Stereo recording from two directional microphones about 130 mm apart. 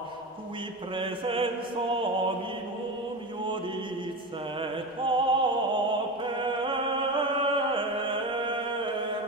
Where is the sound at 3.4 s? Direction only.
40° right (ahead or behind).